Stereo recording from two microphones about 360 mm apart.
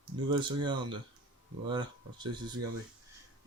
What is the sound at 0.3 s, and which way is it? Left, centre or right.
Speech, centre.